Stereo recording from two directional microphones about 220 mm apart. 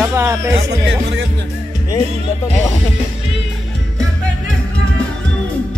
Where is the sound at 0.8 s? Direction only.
55° right (ahead or behind).